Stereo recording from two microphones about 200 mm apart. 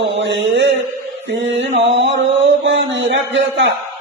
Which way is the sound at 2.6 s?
65° right (ahead or behind).